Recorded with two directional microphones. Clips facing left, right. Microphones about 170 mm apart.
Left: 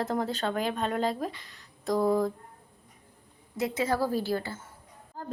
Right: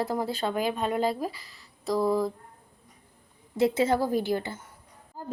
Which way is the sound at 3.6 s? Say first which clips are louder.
Right 4 dB; 25° right (ahead or behind).